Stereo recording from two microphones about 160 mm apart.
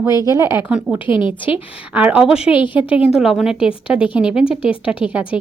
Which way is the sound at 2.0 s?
10° right (ahead or behind).